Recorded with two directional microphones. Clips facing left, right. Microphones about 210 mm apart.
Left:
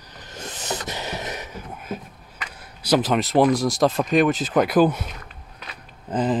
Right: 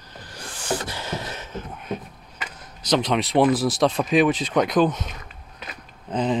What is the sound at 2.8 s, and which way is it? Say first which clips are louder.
Speech: left 2 dB; 5° left (ahead or behind).